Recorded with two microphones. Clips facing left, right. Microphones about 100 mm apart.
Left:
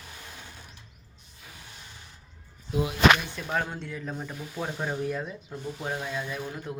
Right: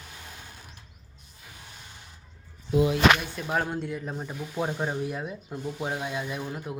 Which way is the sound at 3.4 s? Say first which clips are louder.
Right 3 dB; 10° right (ahead or behind).